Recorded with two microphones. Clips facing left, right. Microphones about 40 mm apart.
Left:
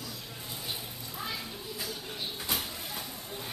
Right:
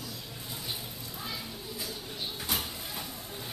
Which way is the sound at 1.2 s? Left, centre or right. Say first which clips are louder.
Left 2 dB; centre.